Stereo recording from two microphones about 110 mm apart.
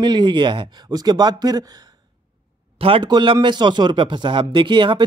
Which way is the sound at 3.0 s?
40° right (ahead or behind).